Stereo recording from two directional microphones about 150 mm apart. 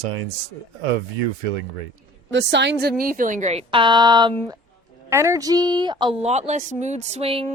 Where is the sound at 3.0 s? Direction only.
65° right (ahead or behind).